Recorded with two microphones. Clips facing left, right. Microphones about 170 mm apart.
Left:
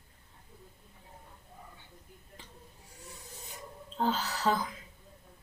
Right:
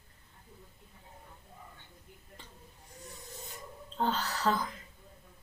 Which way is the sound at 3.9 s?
5° left (ahead or behind).